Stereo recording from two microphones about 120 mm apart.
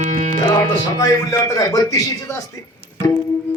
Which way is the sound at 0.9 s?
30° left (ahead or behind).